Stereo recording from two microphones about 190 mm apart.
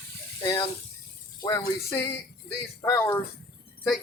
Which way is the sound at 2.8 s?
15° left (ahead or behind).